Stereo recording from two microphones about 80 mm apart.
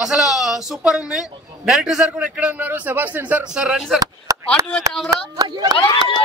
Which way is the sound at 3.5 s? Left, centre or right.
Centre.